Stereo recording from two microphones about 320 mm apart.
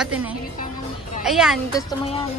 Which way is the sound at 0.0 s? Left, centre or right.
Centre.